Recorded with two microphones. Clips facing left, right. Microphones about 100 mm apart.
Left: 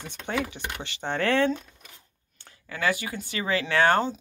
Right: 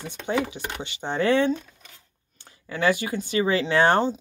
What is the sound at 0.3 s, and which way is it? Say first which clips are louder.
Speech: right 4 dB; 25° right (ahead or behind).